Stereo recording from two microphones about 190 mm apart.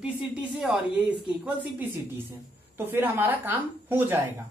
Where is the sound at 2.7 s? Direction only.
10° right (ahead or behind).